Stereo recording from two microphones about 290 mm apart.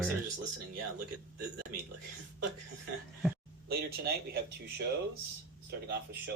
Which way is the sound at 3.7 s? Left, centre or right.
Right.